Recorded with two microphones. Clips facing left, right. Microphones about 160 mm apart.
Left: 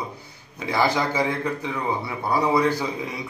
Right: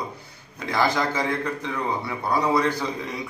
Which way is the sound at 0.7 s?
10° left (ahead or behind).